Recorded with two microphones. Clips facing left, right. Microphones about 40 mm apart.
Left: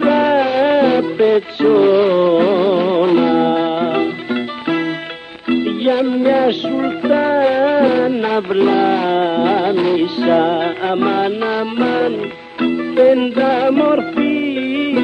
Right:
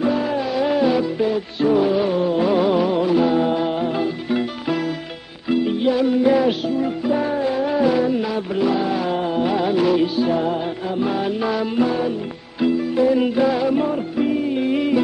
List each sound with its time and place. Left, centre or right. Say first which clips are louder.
0.0 s music: left 8 dB; left
2.5 s music: left 4 dB; left
6.0 s music: left 1 dB; left
6.7 s music: left 5 dB; left
9.7 s music: left 3 dB; left
10.1 s music: left 6 dB; left